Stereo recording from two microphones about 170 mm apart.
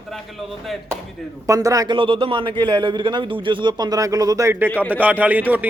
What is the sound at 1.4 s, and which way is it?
A man's voice, 20° right (ahead or behind).